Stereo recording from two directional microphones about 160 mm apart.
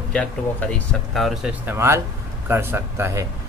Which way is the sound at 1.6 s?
15° right (ahead or behind).